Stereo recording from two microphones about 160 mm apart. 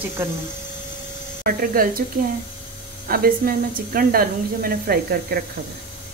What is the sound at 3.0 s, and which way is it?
Speech, 65° right (ahead or behind).